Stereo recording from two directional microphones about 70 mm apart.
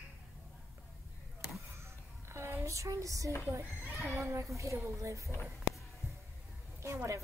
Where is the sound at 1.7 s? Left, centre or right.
Right.